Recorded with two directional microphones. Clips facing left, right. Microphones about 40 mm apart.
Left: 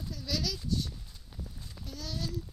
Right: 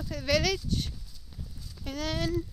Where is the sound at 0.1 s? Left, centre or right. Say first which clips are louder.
Right 9 dB; right.